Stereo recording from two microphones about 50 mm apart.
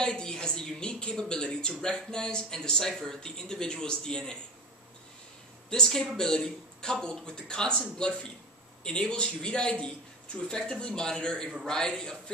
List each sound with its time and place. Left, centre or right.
0.0 s a woman's voice: centre
5.9 s speech: centre
8.8 s speech: centre